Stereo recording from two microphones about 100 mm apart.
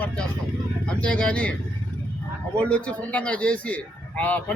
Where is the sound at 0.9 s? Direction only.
10° left (ahead or behind).